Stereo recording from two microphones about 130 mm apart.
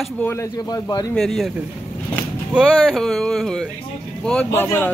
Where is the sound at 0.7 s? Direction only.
30° left (ahead or behind).